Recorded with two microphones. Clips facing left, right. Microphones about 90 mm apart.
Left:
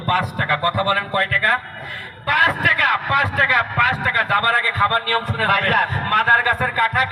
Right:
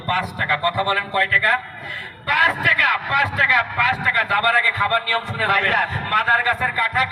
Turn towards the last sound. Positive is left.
turn(degrees=45)  # may be behind; listen again after turning